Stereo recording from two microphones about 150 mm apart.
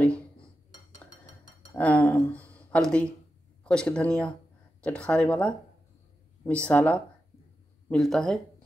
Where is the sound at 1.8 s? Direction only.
10° left (ahead or behind).